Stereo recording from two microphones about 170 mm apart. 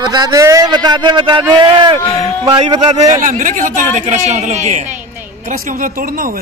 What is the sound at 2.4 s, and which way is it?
Speech, 35° right (ahead or behind).